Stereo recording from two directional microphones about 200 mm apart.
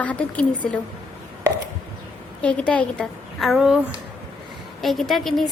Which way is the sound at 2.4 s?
5° left (ahead or behind).